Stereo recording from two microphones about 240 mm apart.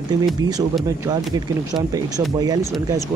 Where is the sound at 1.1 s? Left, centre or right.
Centre.